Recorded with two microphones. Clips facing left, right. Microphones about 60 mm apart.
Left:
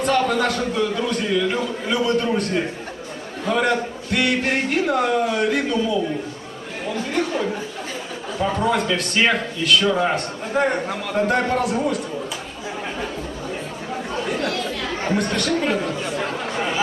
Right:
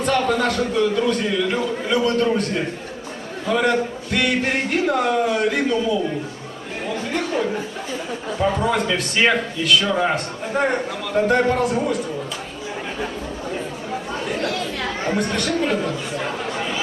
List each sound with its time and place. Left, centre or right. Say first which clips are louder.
0.0 s a man's voice: even; centre
3.5 s a man's voice: right 1 dB; centre
7.1 s a sound: even; centre
8.4 s a man's voice: even; centre
15.1 s speech: left 2 dB; centre